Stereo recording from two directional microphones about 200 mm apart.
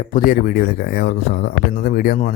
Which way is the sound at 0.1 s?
45° left (ahead or behind).